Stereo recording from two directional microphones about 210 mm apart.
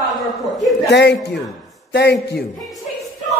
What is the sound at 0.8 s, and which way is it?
A man's voice, 50° left (ahead or behind).